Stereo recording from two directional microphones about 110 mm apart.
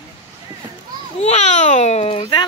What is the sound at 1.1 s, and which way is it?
A child's voice, 90° left.